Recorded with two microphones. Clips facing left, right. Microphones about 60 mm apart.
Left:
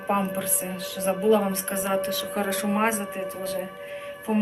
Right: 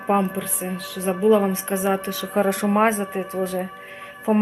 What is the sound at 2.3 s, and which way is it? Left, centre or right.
Speech, right.